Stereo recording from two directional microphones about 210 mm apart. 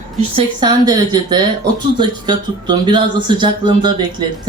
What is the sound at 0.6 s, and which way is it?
Speech, 20° right (ahead or behind).